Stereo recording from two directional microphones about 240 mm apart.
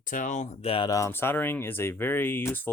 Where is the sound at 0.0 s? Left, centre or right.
Left.